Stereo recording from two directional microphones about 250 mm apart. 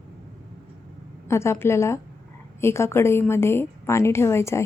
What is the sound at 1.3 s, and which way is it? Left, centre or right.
A woman's voice, centre.